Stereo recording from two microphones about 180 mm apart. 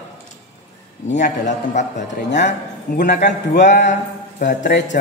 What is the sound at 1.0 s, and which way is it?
A man's voice, 40° left (ahead or behind).